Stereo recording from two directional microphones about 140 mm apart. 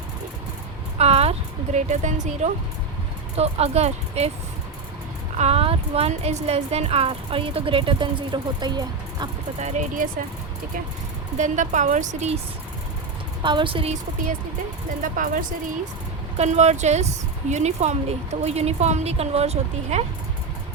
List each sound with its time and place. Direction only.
0.9 s a woman's voice: 45° right (ahead or behind)
5.4 s a woman's voice: 45° right (ahead or behind); by 9.3 s 30° right (ahead or behind)
9.6 s a woman's voice: 55° right (ahead or behind)
11.3 s a woman's voice: 60° right (ahead or behind)
13.4 s a woman's voice: 35° right (ahead or behind)
15.0 s speech: 80° right
16.4 s a woman's voice: 50° right (ahead or behind)